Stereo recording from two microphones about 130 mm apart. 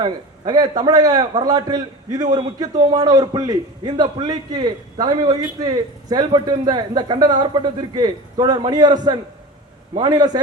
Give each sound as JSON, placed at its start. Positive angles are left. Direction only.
{"t": 0.0, "sound": "a man's voice", "side_deg": -30}